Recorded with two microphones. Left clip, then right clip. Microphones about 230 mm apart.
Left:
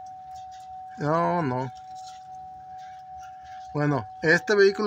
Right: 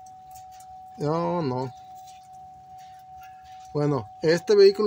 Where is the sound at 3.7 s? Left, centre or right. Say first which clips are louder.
Right 1 dB; centre.